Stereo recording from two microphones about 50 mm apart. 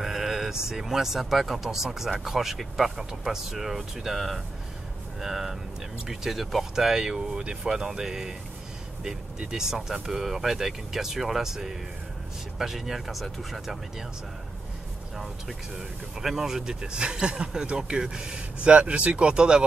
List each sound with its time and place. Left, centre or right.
0.0 s speech: centre
16.2 s speech: centre